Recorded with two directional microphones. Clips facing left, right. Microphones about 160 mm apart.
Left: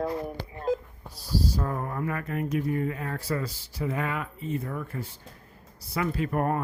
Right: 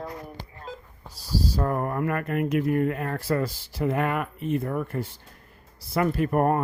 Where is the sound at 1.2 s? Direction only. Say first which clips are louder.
Right 2 dB; 65° right (ahead or behind).